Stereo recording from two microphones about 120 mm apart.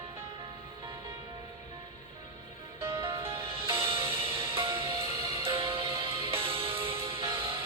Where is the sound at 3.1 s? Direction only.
25° right (ahead or behind).